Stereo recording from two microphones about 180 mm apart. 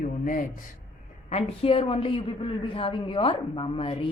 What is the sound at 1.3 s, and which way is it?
A woman's voice, 35° left (ahead or behind).